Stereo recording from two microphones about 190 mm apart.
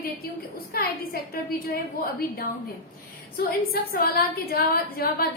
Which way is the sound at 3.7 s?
55° left (ahead or behind).